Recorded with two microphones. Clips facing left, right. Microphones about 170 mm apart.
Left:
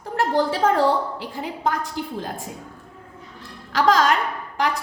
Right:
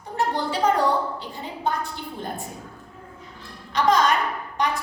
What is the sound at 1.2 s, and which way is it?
A woman's voice, 90° left.